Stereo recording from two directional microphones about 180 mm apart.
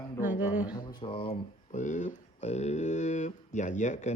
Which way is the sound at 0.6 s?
20° left (ahead or behind).